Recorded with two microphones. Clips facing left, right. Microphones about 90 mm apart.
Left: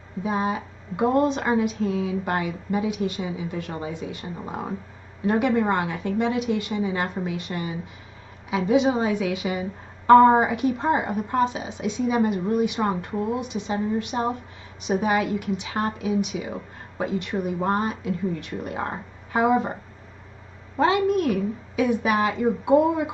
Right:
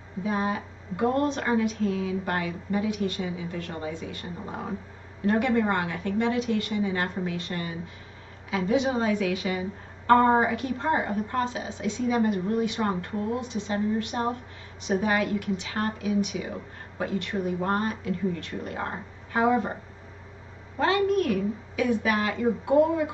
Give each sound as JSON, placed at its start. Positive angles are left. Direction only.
{"t": 0.2, "sound": "a woman's voice", "side_deg": 20}
{"t": 20.7, "sound": "a woman's voice", "side_deg": 20}